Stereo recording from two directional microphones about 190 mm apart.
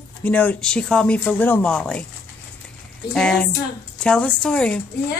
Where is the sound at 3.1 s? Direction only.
5° left (ahead or behind).